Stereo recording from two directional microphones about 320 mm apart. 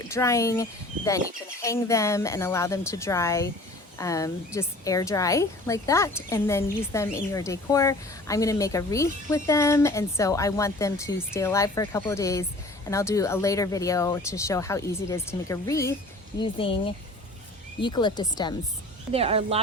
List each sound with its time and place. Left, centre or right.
0.0 s a woman's voice: centre
17.7 s a woman's voice: centre
19.1 s speech: centre